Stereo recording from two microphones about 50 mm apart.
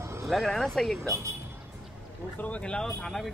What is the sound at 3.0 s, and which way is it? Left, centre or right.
Speech, centre.